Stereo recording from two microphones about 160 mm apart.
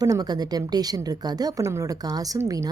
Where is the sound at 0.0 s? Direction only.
25° right (ahead or behind).